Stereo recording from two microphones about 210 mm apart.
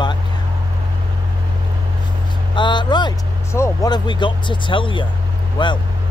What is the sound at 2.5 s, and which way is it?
Vehicle, 20° left (ahead or behind).